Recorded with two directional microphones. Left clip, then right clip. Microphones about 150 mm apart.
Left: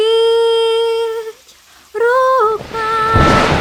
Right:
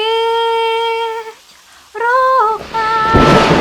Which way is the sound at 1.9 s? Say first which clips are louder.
Even; 40° left (ahead or behind).